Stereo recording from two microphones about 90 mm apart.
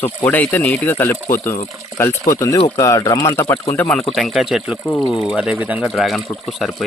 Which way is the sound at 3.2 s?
35° left (ahead or behind).